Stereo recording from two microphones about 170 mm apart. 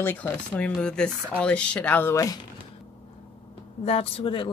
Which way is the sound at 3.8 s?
35° left (ahead or behind).